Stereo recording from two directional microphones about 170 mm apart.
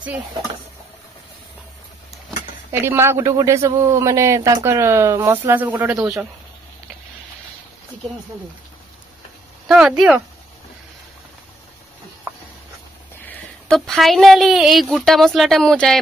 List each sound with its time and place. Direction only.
0.0 s a man's voice: 10° right (ahead or behind)
2.7 s a man's voice: 15° right (ahead or behind)
9.7 s speech: 5° right (ahead or behind)
13.7 s speech: centre (ahead or behind)